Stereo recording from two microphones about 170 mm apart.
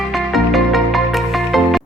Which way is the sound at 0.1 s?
Centre (ahead or behind).